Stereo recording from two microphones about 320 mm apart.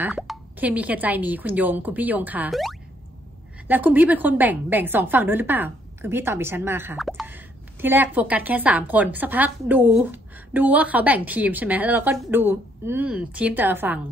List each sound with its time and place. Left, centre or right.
0.0 s a woman's voice: centre